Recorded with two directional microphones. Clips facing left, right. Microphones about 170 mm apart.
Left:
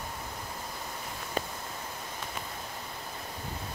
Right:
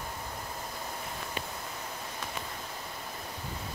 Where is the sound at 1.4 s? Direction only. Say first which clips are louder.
Left 8 dB; 40° left (ahead or behind).